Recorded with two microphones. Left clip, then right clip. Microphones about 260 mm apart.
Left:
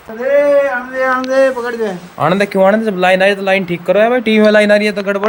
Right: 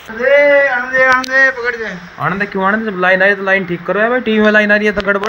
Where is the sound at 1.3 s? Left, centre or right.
Left.